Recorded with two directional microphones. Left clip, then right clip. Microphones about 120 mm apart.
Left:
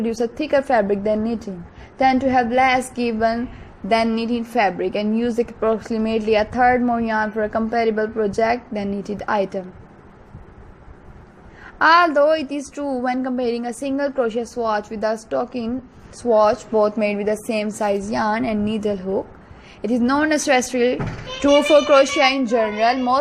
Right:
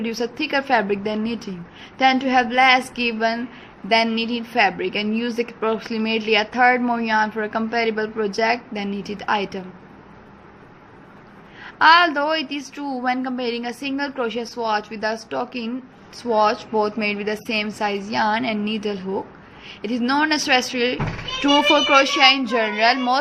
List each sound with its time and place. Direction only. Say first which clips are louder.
0.0 s a woman's voice: left 2 dB; 40° left (ahead or behind)
3.8 s a woman's voice: even; 50° left (ahead or behind)
11.6 s a woman's voice: even; 45° left (ahead or behind)
17.7 s a woman's voice: left 3 dB; 35° left (ahead or behind)
18.1 s a woman's voice: even; 55° left (ahead or behind)
21.4 s a woman's voice: left 2 dB; 40° left (ahead or behind)
22.4 s a woman's voice: even; 25° left (ahead or behind)